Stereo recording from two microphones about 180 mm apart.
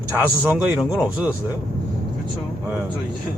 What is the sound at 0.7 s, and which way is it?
Speech, 5° right (ahead or behind).